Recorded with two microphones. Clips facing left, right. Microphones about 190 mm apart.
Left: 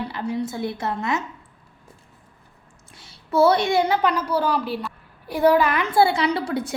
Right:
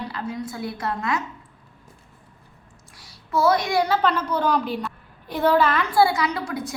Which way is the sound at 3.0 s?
30° left (ahead or behind).